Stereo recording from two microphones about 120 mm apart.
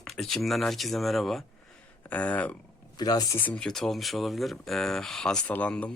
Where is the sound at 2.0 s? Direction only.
10° left (ahead or behind).